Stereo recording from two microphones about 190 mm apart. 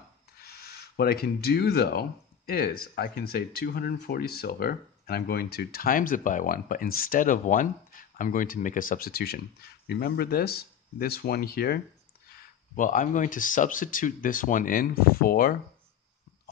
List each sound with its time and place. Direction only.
0.4 s speech: 55° left (ahead or behind)
12.7 s speech: 45° left (ahead or behind)